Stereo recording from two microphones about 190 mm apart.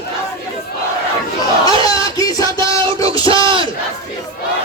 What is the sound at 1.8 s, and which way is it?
Music, 20° left (ahead or behind).